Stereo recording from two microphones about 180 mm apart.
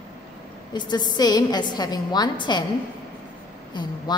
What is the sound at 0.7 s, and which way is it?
A woman's voice, 25° left (ahead or behind).